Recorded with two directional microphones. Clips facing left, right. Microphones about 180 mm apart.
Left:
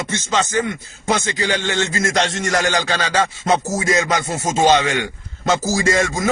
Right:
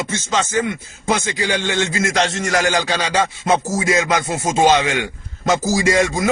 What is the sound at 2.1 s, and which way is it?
Rapping, centre (ahead or behind).